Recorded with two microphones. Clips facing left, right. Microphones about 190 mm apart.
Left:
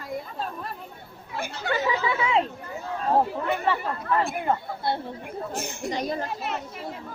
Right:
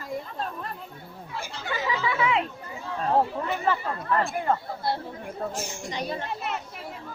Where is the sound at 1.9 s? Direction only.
30° left (ahead or behind).